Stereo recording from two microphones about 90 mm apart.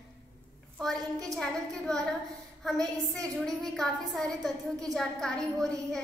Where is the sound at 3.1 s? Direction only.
5° left (ahead or behind).